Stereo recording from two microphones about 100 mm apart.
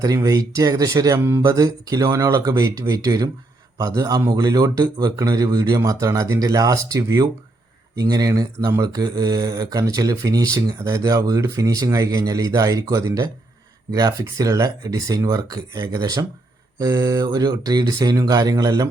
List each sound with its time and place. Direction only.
0.0 s speech: 35° right (ahead or behind)